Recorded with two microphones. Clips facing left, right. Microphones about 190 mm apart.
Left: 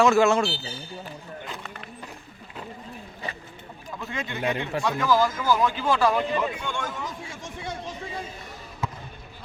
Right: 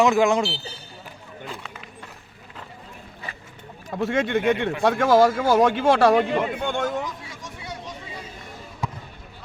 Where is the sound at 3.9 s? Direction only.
70° right (ahead or behind).